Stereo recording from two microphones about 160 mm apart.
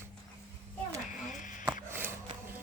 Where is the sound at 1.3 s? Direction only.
55° left (ahead or behind).